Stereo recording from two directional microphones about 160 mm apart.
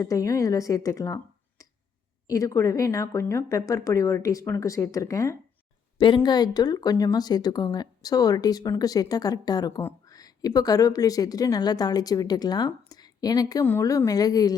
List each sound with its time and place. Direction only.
0.0 s speech: 20° left (ahead or behind)
6.0 s speech: 30° left (ahead or behind)